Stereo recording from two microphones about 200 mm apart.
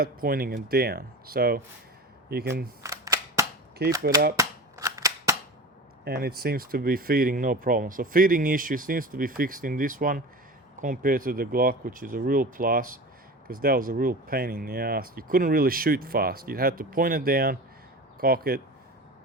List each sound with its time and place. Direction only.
0.0 s speech: 45° right (ahead or behind)
2.8 s cap gun: 15° right (ahead or behind)
3.8 s speech: 50° right (ahead or behind)
4.4 s scissors: 15° right (ahead or behind)
6.1 s speech: 50° right (ahead or behind)